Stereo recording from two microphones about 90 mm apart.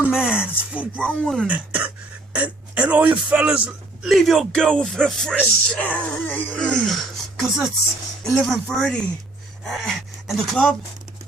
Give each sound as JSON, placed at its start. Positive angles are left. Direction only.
{"t": 0.0, "sound": "speech", "side_deg": -10}
{"t": 0.9, "sound": "speech", "side_deg": 10}
{"t": 1.5, "sound": "speech", "side_deg": -15}
{"t": 4.0, "sound": "speech", "side_deg": 0}
{"t": 8.2, "sound": "speech", "side_deg": 0}